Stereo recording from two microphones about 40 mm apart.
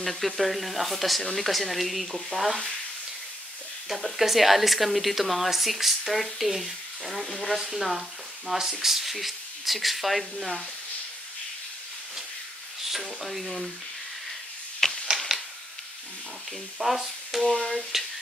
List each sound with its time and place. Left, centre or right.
0.0 s speech: centre
3.9 s speech: centre
7.5 s speech: centre
12.9 s speech: centre
14.8 s a sound: centre
16.7 s speech: centre
17.5 s a sound: centre